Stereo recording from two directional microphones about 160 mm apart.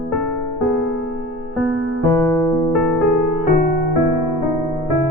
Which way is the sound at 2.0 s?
20° left (ahead or behind).